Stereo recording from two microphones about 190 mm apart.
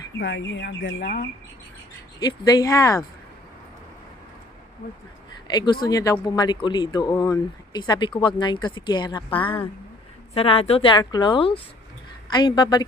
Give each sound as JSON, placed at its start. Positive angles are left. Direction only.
{"t": 0.2, "sound": "speech", "side_deg": 80}
{"t": 2.1, "sound": "speech", "side_deg": 20}
{"t": 5.5, "sound": "speech", "side_deg": 20}